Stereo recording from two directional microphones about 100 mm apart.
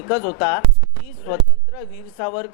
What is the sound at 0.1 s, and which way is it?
Speech, 25° left (ahead or behind).